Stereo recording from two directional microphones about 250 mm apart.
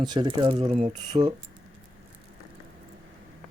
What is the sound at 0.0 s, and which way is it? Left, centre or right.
Speech, centre.